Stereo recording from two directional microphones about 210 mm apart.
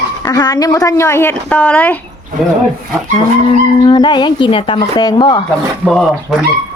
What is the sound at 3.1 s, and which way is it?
Livestock, 20° left (ahead or behind).